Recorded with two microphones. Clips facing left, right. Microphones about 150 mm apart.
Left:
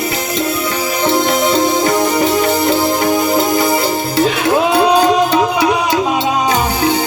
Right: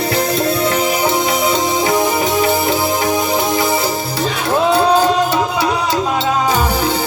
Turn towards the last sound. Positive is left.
turn(degrees=15)  # may be behind; listen again after turning